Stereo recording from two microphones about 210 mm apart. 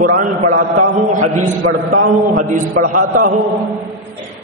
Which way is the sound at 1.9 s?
40° right (ahead or behind).